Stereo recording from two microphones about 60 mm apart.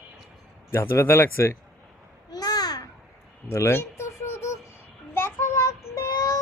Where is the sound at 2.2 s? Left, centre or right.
Left.